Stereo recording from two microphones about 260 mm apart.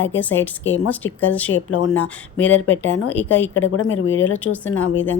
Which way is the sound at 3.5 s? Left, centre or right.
Left.